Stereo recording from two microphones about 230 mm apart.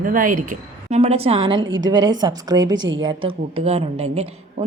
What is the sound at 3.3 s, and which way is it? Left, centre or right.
A woman's voice, right.